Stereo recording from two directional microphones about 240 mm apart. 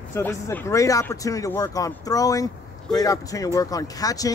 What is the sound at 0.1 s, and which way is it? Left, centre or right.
Speech, centre.